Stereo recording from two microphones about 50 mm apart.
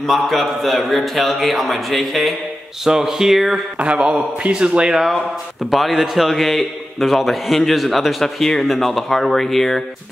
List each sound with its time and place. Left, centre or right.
0.0 s a man's voice: centre
2.8 s speech: centre
3.8 s a man's voice: right
4.9 s a man's voice: centre